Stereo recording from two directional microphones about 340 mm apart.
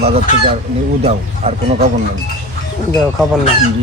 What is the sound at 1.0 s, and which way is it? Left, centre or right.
Speech, centre.